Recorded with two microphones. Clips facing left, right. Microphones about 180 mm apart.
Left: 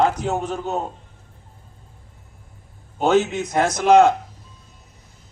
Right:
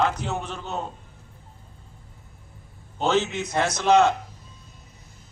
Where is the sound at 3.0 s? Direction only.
50° left (ahead or behind).